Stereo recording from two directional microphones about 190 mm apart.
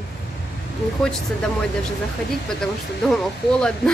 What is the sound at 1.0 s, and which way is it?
A woman's voice, 5° left (ahead or behind).